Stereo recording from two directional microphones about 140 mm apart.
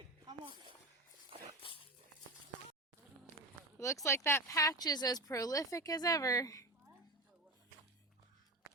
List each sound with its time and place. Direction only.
1.3 s dog: 45° right (ahead or behind)
3.8 s speech: 20° left (ahead or behind)